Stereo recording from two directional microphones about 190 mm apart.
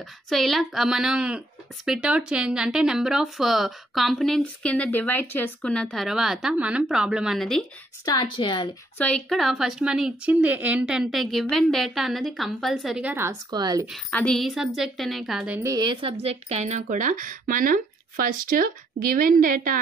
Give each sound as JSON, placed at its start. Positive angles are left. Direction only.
{"t": 0.3, "sound": "a woman's voice", "side_deg": 0}
{"t": 8.0, "sound": "a woman's voice", "side_deg": 20}
{"t": 8.9, "sound": "a woman's voice", "side_deg": 5}
{"t": 13.8, "sound": "a woman's voice", "side_deg": 0}